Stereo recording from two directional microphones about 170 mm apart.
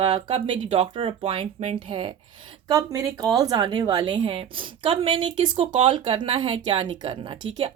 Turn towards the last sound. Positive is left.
turn(degrees=-30)  # may be behind; listen again after turning